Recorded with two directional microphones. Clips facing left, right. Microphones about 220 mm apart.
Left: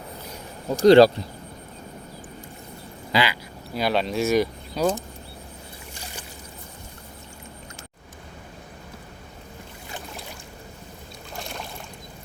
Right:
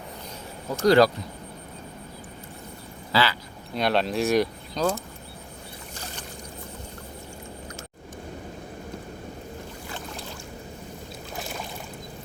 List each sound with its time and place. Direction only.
0.7 s speech: 25° left (ahead or behind)
3.1 s duck: 15° left (ahead or behind)
3.8 s speech: centre (ahead or behind)
11.3 s boat: 5° right (ahead or behind)